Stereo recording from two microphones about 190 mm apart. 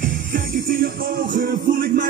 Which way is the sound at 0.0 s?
45° right (ahead or behind).